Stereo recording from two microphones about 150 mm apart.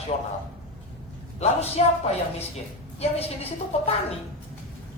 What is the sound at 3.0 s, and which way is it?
Speech, 45° left (ahead or behind).